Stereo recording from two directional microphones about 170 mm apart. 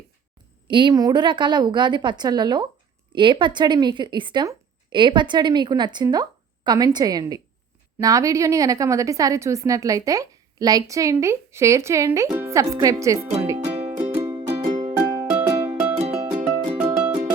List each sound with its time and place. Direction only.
0.7 s a woman's voice: 25° right (ahead or behind)
13.9 s music: 10° right (ahead or behind)
14.3 s music: 20° right (ahead or behind)
14.7 s music: 40° right (ahead or behind)
15.3 s music: 15° right (ahead or behind)
16.0 s music: 35° right (ahead or behind)